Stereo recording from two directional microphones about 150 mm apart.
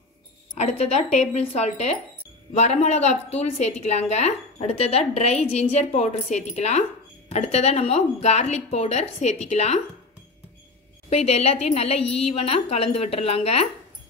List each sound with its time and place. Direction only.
0.6 s a woman's voice: 50° left (ahead or behind)
11.1 s a woman's voice: 45° left (ahead or behind)